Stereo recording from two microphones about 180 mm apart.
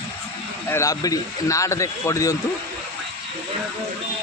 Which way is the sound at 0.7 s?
20° left (ahead or behind).